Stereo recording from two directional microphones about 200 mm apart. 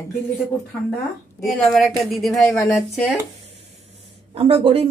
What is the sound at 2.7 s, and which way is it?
Speech, centre (ahead or behind).